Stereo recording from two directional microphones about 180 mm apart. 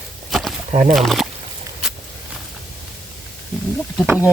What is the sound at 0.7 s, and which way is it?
Speech, 45° right (ahead or behind).